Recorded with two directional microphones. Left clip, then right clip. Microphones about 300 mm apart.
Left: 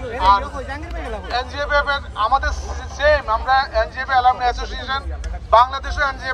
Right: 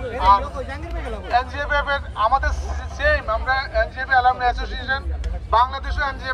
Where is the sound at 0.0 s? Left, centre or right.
Left.